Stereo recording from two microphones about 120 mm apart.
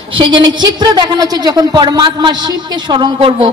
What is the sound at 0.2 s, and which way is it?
A woman's voice, 40° right (ahead or behind).